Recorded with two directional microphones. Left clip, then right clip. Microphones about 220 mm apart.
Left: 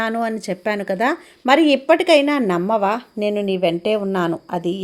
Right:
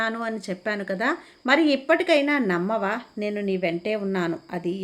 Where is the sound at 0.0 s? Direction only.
25° left (ahead or behind).